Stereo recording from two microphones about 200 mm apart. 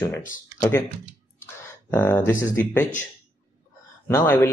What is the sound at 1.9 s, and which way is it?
Speech, 10° left (ahead or behind).